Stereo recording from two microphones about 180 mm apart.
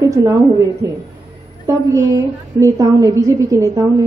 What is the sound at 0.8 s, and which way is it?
A woman's voice, 20° right (ahead or behind).